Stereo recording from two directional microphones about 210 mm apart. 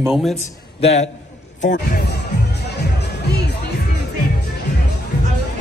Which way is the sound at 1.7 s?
50° left (ahead or behind).